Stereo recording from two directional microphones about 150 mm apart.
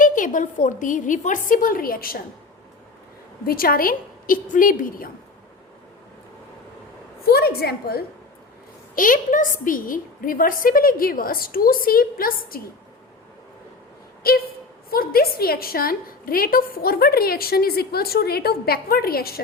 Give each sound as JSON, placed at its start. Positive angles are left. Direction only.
{"t": 0.0, "sound": "a woman's voice", "side_deg": 60}
{"t": 3.4, "sound": "a woman's voice", "side_deg": 75}
{"t": 7.3, "sound": "a woman's voice", "side_deg": 90}
{"t": 9.0, "sound": "a woman's voice", "side_deg": 65}
{"t": 14.3, "sound": "a woman's voice", "side_deg": 90}